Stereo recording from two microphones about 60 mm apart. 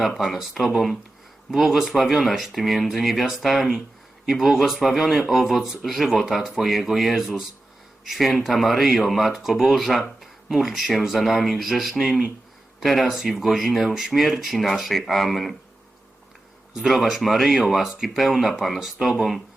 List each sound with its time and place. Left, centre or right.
0.2 s speech: centre
16.7 s speech: centre